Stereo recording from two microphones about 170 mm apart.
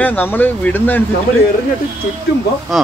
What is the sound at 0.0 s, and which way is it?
Speech, 10° left (ahead or behind).